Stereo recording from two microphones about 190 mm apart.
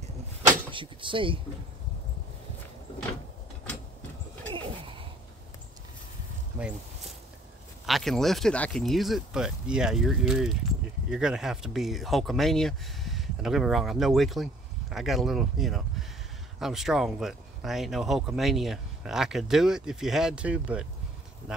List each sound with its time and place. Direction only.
0.5 s speech: 25° right (ahead or behind)
4.6 s a sound: 25° right (ahead or behind)
7.8 s speech: centre (ahead or behind)